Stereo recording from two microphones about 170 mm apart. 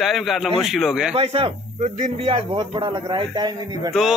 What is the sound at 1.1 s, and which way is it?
Speech, 35° right (ahead or behind).